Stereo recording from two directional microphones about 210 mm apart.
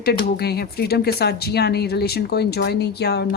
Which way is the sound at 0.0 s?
50° left (ahead or behind).